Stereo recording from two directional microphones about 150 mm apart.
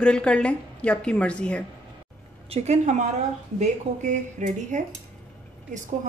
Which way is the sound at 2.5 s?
50° right (ahead or behind).